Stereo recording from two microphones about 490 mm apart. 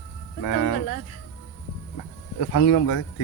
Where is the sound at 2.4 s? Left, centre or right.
Left.